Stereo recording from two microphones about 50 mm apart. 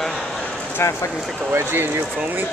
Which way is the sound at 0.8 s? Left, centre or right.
Left.